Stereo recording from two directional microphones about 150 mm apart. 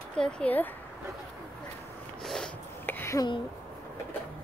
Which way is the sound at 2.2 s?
5° left (ahead or behind).